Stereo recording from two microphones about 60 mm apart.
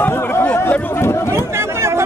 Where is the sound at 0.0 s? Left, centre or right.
Left.